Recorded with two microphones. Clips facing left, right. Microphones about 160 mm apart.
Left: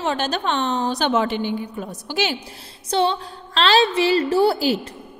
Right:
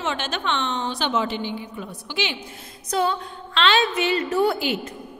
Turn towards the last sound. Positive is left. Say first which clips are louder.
# left 4 dB
turn(degrees=35)  # may be behind; listen again after turning